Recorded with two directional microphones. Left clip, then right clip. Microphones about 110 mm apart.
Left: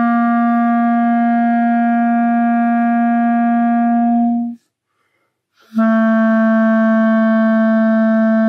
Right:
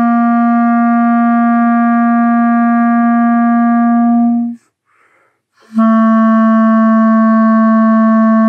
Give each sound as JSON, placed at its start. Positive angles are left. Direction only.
{"t": 0.0, "sound": "music", "side_deg": 25}
{"t": 5.8, "sound": "music", "side_deg": 35}